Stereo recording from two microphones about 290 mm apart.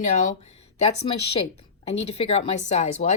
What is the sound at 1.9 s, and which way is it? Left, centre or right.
Speech, left.